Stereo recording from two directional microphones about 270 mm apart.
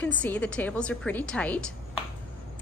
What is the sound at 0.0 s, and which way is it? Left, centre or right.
Speech, centre.